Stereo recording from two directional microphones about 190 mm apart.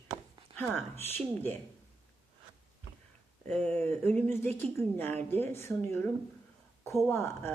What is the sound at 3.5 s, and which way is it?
Speech, 5° left (ahead or behind).